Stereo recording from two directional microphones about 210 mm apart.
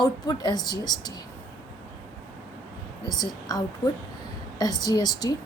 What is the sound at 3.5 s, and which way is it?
A woman's voice, 20° left (ahead or behind).